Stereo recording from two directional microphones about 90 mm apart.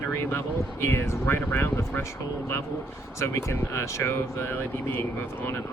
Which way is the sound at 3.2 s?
30° left (ahead or behind).